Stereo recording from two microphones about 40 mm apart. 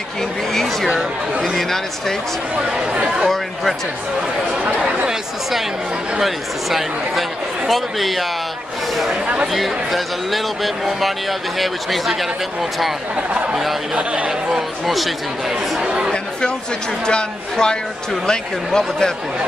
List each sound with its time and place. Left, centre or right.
0.5 s speech: centre
2.5 s speech: right
4.7 s speech: centre
6.1 s speech: centre
13.1 s speech: right
14.5 s speech: centre
15.8 s chatter: right
16.1 s chatter: left
17.0 s speech: centre